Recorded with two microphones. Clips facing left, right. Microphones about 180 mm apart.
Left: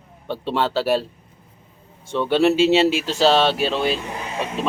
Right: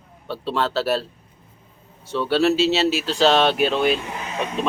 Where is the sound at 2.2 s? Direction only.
15° left (ahead or behind).